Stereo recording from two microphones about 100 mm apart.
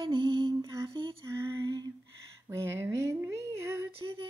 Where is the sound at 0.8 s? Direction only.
50° right (ahead or behind).